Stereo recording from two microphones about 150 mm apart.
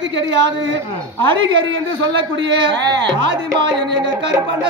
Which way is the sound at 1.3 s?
30° right (ahead or behind).